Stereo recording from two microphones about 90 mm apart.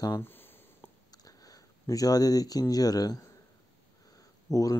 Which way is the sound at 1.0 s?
45° left (ahead or behind).